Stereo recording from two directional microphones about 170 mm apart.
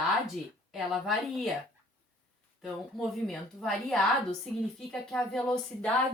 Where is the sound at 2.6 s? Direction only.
Centre (ahead or behind).